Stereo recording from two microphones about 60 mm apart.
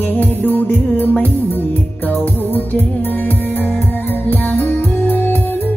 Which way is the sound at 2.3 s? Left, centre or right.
Left.